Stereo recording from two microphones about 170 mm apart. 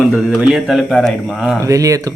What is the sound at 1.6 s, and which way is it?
Speech, 20° right (ahead or behind).